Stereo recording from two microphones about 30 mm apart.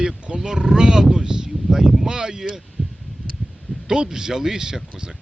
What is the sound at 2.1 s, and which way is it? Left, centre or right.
Speech, right.